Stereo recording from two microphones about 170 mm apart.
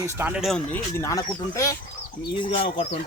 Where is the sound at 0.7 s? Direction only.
15° left (ahead or behind).